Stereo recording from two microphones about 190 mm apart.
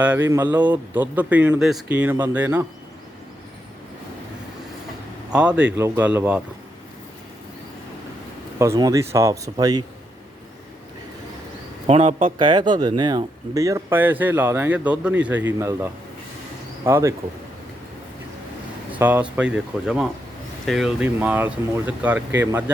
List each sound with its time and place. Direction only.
0.0 s speech: 10° right (ahead or behind)
5.3 s speech: 5° right (ahead or behind)
8.5 s speech: 15° right (ahead or behind)
11.9 s a man's voice: 35° right (ahead or behind)
12.4 s speech: 25° right (ahead or behind)
18.9 s speech: 10° right (ahead or behind)